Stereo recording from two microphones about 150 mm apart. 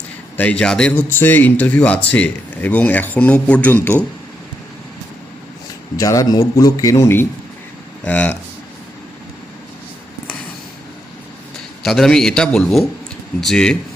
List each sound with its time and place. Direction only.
0.3 s speech: 10° left (ahead or behind)
6.0 s a man's voice: 25° left (ahead or behind); by 8.4 s 10° left (ahead or behind)
11.8 s a man's voice: 5° left (ahead or behind)